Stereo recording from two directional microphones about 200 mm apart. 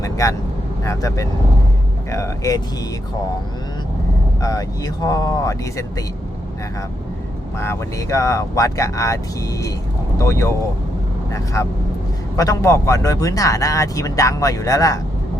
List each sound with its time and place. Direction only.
0.0 s speech: 15° left (ahead or behind)
4.4 s speech: 20° left (ahead or behind)
7.6 s speech: 15° left (ahead or behind)